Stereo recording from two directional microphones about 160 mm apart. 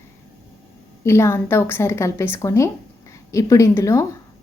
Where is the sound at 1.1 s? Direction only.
15° left (ahead or behind).